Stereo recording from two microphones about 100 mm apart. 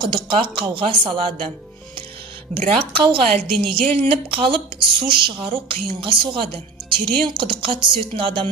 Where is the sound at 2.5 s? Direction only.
90° right.